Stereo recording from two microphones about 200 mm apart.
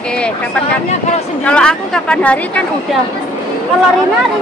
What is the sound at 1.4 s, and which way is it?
A woman's voice, 5° left (ahead or behind).